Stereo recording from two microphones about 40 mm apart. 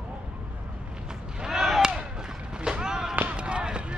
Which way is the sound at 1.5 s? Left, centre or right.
Centre.